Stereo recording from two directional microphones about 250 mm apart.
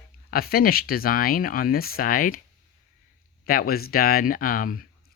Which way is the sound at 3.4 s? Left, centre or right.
Left.